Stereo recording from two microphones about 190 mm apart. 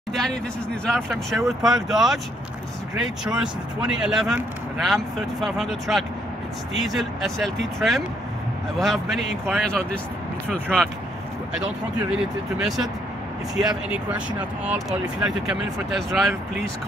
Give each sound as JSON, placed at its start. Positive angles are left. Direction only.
{"t": 0.1, "sound": "speech", "side_deg": 0}
{"t": 8.7, "sound": "speech", "side_deg": 0}
{"t": 12.5, "sound": "speech", "side_deg": 0}